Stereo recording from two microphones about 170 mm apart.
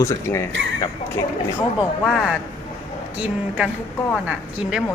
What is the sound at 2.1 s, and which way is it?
Beatboxing, 5° right (ahead or behind).